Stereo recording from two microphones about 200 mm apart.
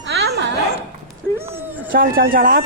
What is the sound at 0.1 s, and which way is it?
Dog, 55° right (ahead or behind).